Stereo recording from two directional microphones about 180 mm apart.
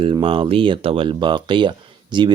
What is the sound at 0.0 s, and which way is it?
Speech, 30° right (ahead or behind).